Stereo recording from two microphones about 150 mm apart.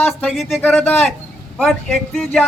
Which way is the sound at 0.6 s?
10° left (ahead or behind).